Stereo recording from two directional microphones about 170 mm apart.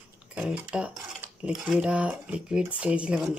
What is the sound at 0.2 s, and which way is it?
Speech, 5° right (ahead or behind).